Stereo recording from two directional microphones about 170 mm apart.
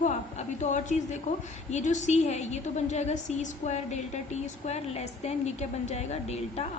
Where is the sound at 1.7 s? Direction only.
45° left (ahead or behind).